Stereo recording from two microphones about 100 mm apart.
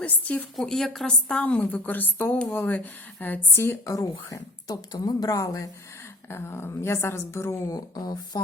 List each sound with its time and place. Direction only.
0.0 s a woman's voice: 15° left (ahead or behind)
0.5 s a woman's voice: 5° left (ahead or behind); by 3.9 s 25° left (ahead or behind)
3.9 s speech: 35° left (ahead or behind)
6.3 s a woman's voice: 25° left (ahead or behind); by 8.4 s 40° left (ahead or behind)